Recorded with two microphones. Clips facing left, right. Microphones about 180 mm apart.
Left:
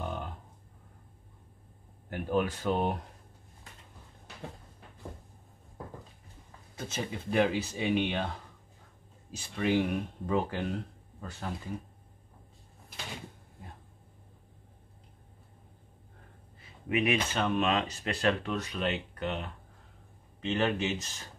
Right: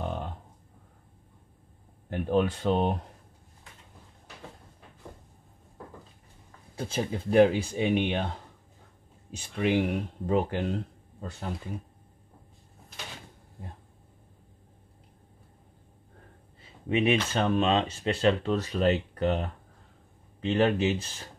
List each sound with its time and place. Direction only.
0.0 s a sound: 30° right (ahead or behind)
2.0 s speech: 30° right (ahead or behind)
6.8 s speech: 30° right (ahead or behind)
9.6 s speech: 20° right (ahead or behind)
16.9 s speech: 30° right (ahead or behind)